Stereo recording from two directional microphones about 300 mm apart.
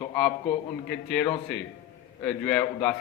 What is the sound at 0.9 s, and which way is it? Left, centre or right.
A man's voice, centre.